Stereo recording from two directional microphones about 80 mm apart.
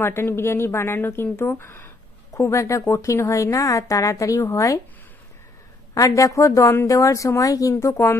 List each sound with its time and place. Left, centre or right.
0.0 s a woman's voice: left
5.9 s a woman's voice: left
7.7 s a woman's voice: left